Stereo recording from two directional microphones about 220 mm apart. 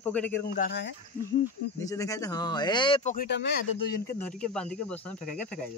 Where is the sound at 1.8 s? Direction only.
15° left (ahead or behind); by 3.3 s 30° left (ahead or behind).